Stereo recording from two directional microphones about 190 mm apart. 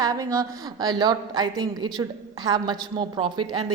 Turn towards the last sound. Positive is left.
turn(degrees=-25)  # may be behind; listen again after turning